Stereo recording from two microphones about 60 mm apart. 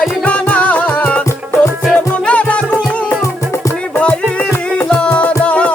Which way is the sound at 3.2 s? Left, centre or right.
Left.